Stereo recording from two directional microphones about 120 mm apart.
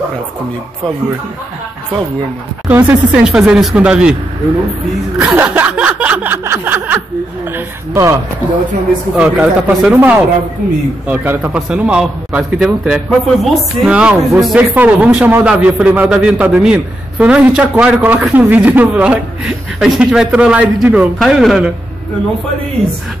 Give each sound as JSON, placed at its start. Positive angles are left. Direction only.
{"t": 2.7, "sound": "a man's voice", "side_deg": -15}
{"t": 5.2, "sound": "a sound", "side_deg": -15}
{"t": 7.5, "sound": "speech", "side_deg": -25}
{"t": 9.1, "sound": "a man's voice", "side_deg": -10}